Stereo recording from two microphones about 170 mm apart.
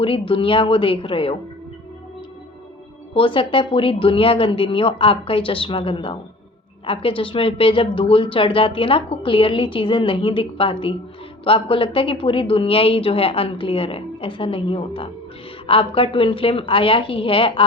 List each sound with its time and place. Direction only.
0.0 s speech: 30° left (ahead or behind)
3.2 s speech: 30° left (ahead or behind)